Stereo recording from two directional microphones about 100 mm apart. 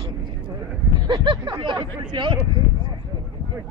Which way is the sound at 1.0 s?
50° right (ahead or behind).